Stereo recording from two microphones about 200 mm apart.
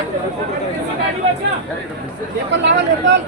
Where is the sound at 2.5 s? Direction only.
65° right (ahead or behind).